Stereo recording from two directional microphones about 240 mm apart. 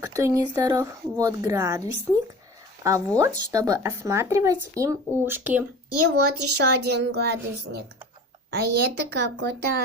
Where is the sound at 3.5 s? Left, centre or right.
Centre.